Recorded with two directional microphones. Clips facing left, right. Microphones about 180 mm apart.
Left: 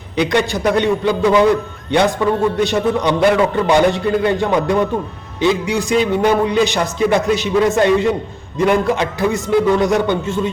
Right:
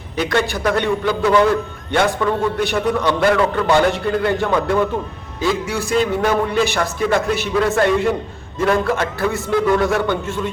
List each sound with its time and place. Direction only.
0.2 s a man's voice: 15° left (ahead or behind)